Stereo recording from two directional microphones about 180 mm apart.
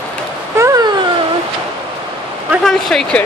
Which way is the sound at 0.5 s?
15° right (ahead or behind).